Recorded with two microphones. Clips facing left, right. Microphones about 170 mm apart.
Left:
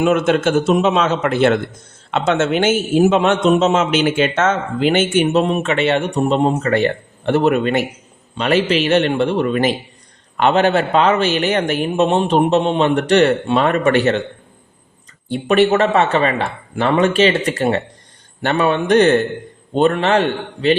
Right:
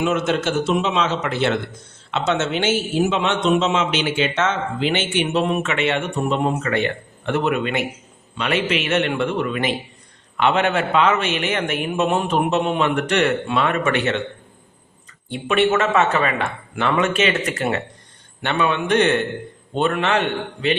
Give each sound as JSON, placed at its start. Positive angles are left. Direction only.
{"t": 0.0, "sound": "a man's voice", "side_deg": 55}
{"t": 15.3, "sound": "a man's voice", "side_deg": 35}